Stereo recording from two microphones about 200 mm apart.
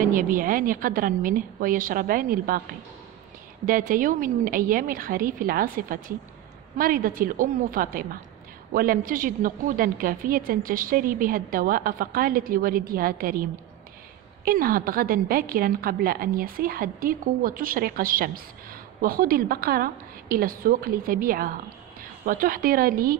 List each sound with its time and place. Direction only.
0.0 s a woman's voice: 45° right (ahead or behind)
3.6 s a woman's voice: 45° right (ahead or behind)